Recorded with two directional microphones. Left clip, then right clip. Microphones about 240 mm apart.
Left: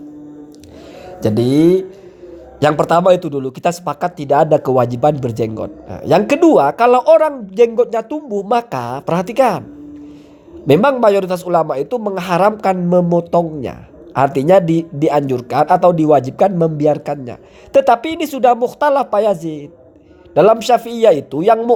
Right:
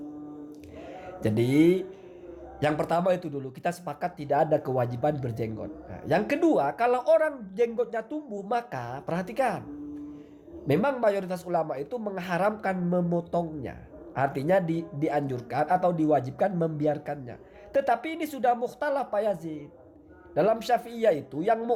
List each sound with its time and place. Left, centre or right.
1.2 s speech: centre
2.6 s a man's voice: left
10.7 s a man's voice: left